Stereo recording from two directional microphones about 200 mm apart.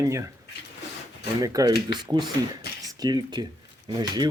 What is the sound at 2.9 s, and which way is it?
Speech, 20° right (ahead or behind).